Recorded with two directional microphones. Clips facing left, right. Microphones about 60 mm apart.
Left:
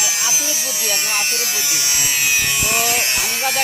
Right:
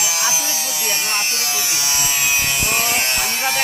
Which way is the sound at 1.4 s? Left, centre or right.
Right.